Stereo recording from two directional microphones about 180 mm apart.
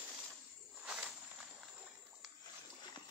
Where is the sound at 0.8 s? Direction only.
5° right (ahead or behind).